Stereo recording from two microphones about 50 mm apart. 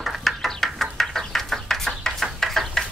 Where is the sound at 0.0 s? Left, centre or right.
Centre.